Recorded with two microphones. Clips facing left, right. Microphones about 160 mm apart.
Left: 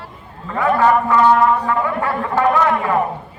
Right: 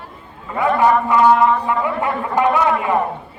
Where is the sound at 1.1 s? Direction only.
15° right (ahead or behind).